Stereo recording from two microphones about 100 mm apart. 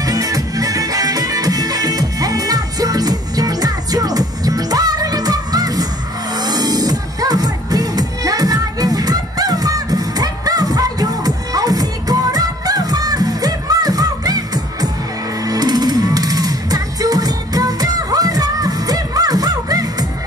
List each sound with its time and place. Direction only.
0.0 s music: 35° right (ahead or behind)